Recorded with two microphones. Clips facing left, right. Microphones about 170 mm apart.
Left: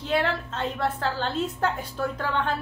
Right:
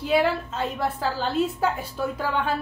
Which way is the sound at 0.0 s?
10° right (ahead or behind).